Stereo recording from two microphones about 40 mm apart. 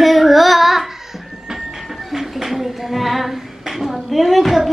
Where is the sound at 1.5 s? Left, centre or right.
Centre.